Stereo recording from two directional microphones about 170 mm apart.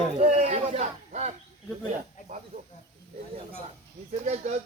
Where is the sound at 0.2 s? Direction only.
40° right (ahead or behind).